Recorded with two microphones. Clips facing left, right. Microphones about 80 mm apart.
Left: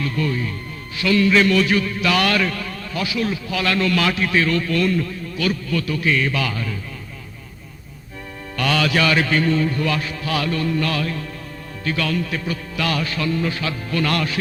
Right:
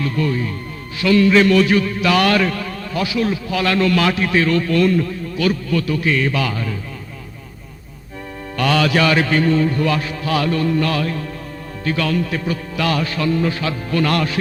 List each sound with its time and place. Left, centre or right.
0.0 s a man's voice: right
8.5 s a man's voice: right